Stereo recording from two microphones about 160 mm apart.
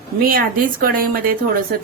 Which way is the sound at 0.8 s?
65° right (ahead or behind).